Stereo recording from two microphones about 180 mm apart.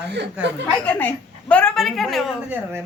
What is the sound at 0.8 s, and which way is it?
A woman's voice, 10° left (ahead or behind).